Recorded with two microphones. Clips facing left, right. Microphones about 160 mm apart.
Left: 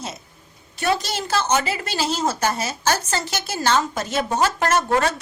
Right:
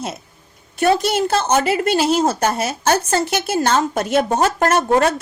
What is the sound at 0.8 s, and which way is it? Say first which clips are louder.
A woman's voice: right 7 dB; 55° right (ahead or behind).